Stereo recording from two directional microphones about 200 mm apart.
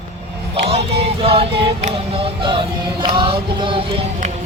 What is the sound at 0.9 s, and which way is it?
Music, 30° right (ahead or behind).